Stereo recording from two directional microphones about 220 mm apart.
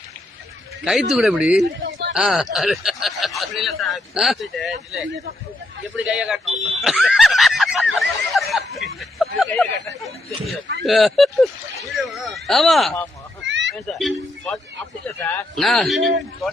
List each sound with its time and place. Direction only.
0.9 s speech: centre (ahead or behind)
1.8 s a sound: 55° right (ahead or behind)
2.1 s speech: centre (ahead or behind)
6.1 s speech: centre (ahead or behind)
7.9 s snicker: centre (ahead or behind)
10.0 s speech: centre (ahead or behind)
13.4 s a sound: 55° right (ahead or behind)
13.8 s speech: 5° left (ahead or behind)
16.0 s a man's voice: 55° right (ahead or behind)